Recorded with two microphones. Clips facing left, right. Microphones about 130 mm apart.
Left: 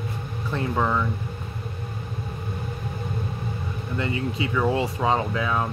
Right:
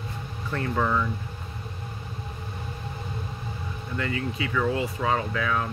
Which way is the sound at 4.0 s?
25° left (ahead or behind).